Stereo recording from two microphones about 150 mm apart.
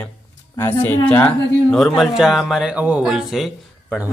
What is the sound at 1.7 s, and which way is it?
Speech, centre (ahead or behind).